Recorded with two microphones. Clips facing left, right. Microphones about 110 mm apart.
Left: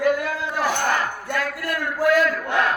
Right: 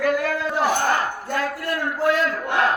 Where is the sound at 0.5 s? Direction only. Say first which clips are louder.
Right 1 dB; 30° right (ahead or behind).